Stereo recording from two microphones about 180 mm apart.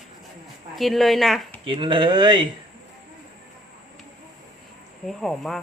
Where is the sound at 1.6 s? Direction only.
30° right (ahead or behind).